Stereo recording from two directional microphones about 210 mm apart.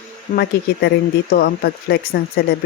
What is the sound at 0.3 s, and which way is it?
Speech, 50° left (ahead or behind).